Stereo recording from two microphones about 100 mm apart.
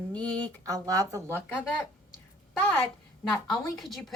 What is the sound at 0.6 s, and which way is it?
Speech, 35° right (ahead or behind).